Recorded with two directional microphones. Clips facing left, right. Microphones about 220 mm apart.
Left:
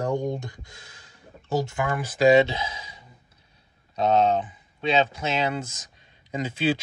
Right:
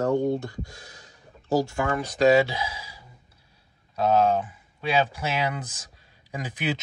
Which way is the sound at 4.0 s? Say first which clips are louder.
Even; 25° left (ahead or behind).